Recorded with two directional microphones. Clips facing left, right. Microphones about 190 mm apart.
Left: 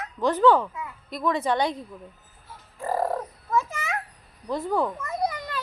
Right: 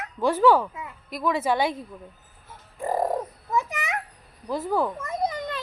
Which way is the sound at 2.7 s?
15° right (ahead or behind).